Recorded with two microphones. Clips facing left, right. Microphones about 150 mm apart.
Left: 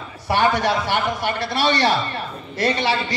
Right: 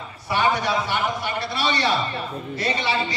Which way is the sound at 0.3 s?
70° left (ahead or behind).